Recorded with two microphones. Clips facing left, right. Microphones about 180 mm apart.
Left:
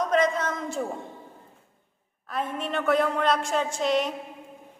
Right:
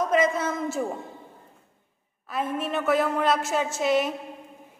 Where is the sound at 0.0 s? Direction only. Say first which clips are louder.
Right 1 dB; 5° right (ahead or behind).